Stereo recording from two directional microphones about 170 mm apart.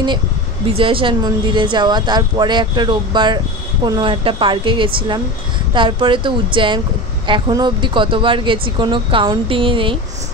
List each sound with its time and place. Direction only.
0.7 s speech: 30° right (ahead or behind)